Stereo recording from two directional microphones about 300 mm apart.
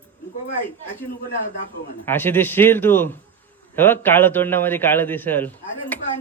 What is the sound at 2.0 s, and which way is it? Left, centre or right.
A man's voice, centre.